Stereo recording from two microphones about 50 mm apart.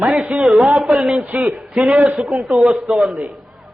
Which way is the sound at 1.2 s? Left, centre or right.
Right.